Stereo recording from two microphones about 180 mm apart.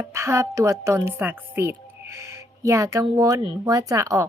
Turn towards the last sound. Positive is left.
turn(degrees=-20)  # may be behind; listen again after turning